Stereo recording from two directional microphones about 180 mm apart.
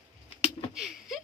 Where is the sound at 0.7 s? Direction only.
Centre (ahead or behind).